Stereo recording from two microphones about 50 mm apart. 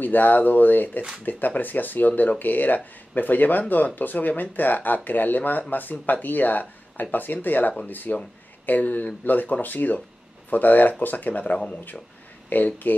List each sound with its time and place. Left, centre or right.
0.0 s speech: left
11.5 s speech: centre
12.4 s speech: left